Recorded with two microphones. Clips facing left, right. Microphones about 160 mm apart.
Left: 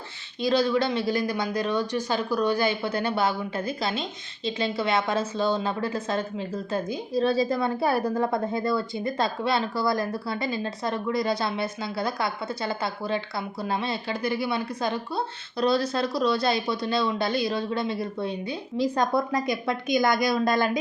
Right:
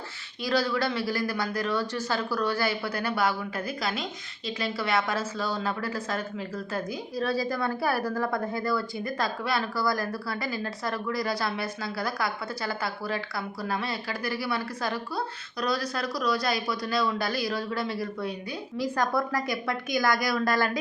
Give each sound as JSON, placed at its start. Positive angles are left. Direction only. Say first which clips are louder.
{"t": 0.4, "sound": "a woman's voice", "louder": "left 4 dB", "side_deg": 20}